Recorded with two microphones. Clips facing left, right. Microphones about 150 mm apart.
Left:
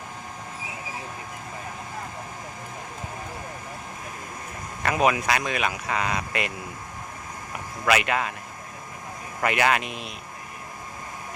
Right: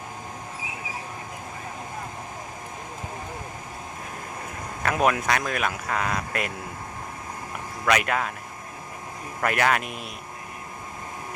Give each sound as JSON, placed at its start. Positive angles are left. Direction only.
{"t": 4.8, "sound": "speech", "side_deg": 0}
{"t": 7.9, "sound": "speech", "side_deg": 5}
{"t": 9.4, "sound": "speech", "side_deg": 5}